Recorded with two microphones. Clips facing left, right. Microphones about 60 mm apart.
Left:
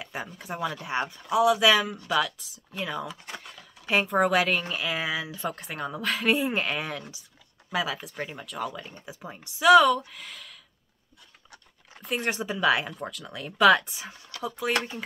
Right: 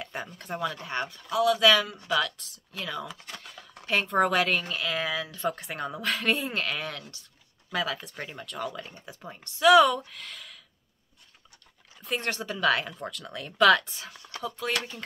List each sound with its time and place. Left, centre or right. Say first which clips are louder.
0.0 s speech: left 1 dB; centre
12.0 s speech: left 1 dB; centre
12.3 s speech: left 2 dB; centre